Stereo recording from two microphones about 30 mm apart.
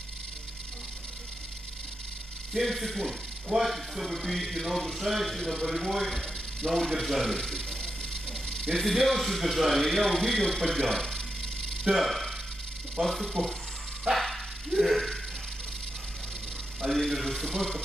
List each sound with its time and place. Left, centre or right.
2.5 s a man's voice: centre
5.4 s a man's voice: centre
5.7 s a man's voice: centre
7.3 s a sound: centre
8.7 s a man's voice: centre
11.8 s a man's voice: centre
14.1 s dog: centre
16.8 s a man's voice: centre